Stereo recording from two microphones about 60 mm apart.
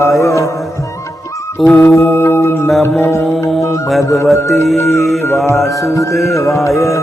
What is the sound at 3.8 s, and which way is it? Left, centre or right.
Music, centre.